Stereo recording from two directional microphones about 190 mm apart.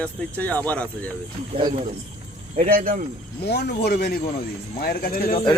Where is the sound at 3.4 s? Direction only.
60° left (ahead or behind).